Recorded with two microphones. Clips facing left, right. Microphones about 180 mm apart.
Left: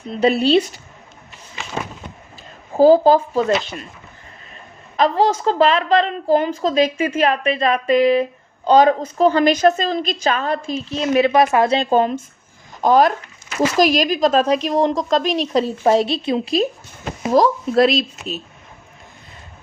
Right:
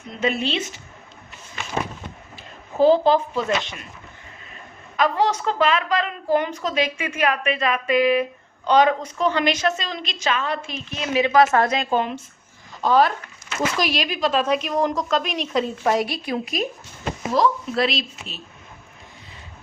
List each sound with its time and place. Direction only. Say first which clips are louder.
0.1 s a woman's voice: left 9 dB; 35° left (ahead or behind)
2.7 s a woman's voice: left 5 dB; 40° left (ahead or behind)
4.9 s a woman's voice: left 4 dB; 30° left (ahead or behind)
17.3 s speech: left 6 dB; 40° left (ahead or behind)